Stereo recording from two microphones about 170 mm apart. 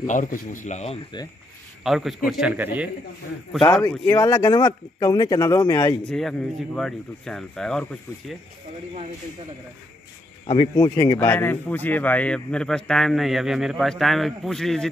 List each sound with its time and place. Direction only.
0.0 s speech: 50° left (ahead or behind)
1.8 s a man's voice: centre (ahead or behind)
3.9 s a man's voice: 15° left (ahead or behind)
6.0 s a man's voice: 5° left (ahead or behind)
10.4 s a man's voice: 30° left (ahead or behind)
11.1 s a man's voice: 10° left (ahead or behind)